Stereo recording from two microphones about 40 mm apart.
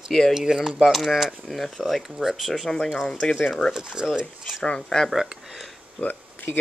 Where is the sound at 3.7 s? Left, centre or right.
Centre.